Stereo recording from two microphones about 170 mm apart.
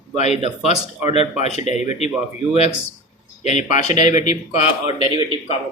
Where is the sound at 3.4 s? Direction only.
45° left (ahead or behind).